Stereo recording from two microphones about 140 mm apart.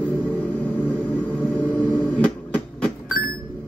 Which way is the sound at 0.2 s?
10° left (ahead or behind).